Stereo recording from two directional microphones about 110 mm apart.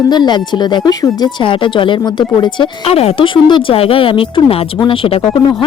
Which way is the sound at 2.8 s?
65° left (ahead or behind).